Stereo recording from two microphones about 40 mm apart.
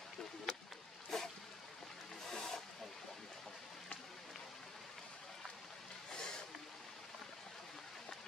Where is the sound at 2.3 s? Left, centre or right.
Centre.